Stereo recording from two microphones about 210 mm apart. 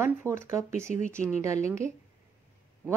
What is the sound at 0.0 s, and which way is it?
Speech, 10° right (ahead or behind).